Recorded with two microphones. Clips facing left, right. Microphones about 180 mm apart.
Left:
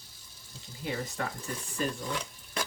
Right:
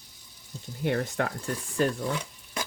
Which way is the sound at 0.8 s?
65° right (ahead or behind).